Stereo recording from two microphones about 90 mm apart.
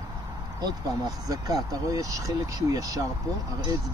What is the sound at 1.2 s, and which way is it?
Speech, 40° right (ahead or behind).